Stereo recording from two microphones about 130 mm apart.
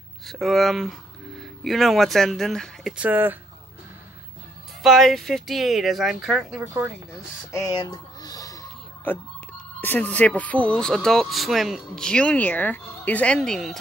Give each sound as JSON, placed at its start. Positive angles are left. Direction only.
{"t": 0.3, "sound": "speech", "side_deg": 0}
{"t": 3.0, "sound": "speech", "side_deg": -15}
{"t": 4.8, "sound": "speech", "side_deg": 0}
{"t": 7.5, "sound": "music", "side_deg": 30}
{"t": 9.1, "sound": "speech", "side_deg": 15}